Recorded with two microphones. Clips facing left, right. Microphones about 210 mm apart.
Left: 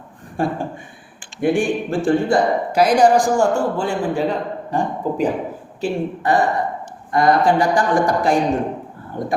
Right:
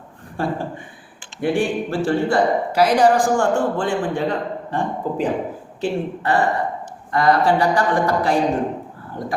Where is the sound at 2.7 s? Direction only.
15° left (ahead or behind).